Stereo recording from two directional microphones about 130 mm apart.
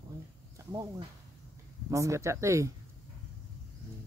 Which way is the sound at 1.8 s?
25° right (ahead or behind).